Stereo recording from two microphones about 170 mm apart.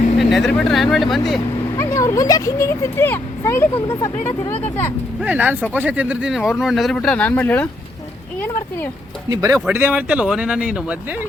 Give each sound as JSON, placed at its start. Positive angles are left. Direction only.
{"t": 0.2, "sound": "speech", "side_deg": 0}
{"t": 1.8, "sound": "speech", "side_deg": 20}
{"t": 5.2, "sound": "speech", "side_deg": -10}
{"t": 9.3, "sound": "speech", "side_deg": -20}
{"t": 9.6, "sound": "speech", "side_deg": -10}